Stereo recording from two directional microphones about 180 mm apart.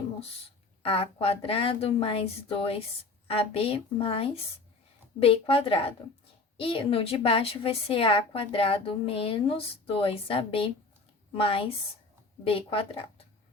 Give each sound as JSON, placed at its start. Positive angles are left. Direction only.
{"t": 0.8, "sound": "a woman's voice", "side_deg": 30}